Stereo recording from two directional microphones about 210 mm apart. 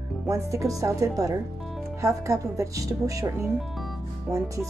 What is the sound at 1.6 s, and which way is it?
Music, centre (ahead or behind).